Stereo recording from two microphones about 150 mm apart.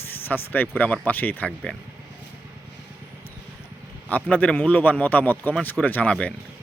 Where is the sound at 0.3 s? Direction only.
15° left (ahead or behind).